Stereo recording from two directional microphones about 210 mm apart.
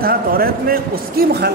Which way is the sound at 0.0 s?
45° right (ahead or behind).